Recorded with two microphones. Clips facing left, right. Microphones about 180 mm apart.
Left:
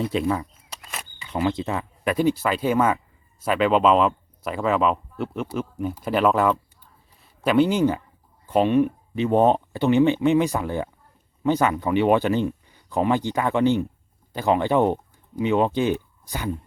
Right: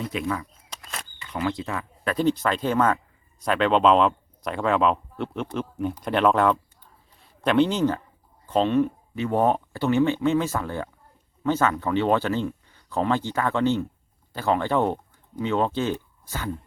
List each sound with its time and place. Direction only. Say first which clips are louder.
0.0 s speech: left 5 dB; 30° left (ahead or behind)
0.7 s a sound: right 3 dB; 5° left (ahead or behind)
1.2 s speech: left 4 dB; 25° left (ahead or behind)
2.1 s speech: even; 10° left (ahead or behind)